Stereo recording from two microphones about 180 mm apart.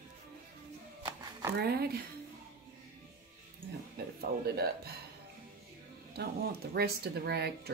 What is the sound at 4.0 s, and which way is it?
Speech, 60° right (ahead or behind).